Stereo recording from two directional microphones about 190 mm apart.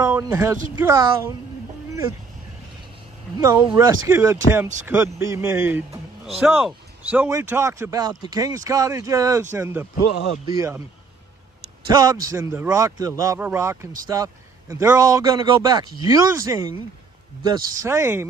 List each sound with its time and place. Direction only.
0.0 s a man's voice: 15° right (ahead or behind)
3.3 s a man's voice: 20° right (ahead or behind)
11.9 s a man's voice: 20° right (ahead or behind)